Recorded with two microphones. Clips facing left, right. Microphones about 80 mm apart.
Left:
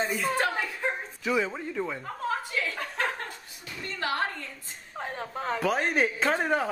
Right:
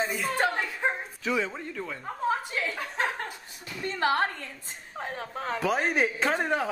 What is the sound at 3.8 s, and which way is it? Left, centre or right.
Speech, right.